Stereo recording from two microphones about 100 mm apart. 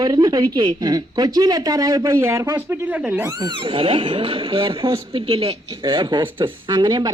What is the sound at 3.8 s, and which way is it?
Speech, 60° right (ahead or behind).